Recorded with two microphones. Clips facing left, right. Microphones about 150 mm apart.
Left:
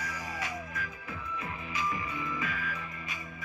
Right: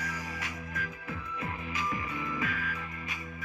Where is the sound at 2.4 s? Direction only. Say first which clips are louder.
Right 2 dB; 55° right (ahead or behind).